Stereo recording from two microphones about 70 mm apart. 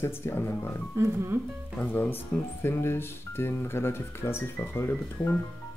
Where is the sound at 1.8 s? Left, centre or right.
Left.